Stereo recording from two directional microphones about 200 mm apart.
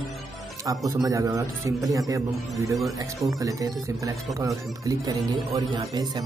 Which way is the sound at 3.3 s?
15° right (ahead or behind).